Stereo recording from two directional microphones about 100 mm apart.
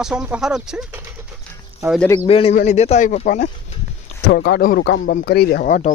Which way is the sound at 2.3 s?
75° left (ahead or behind).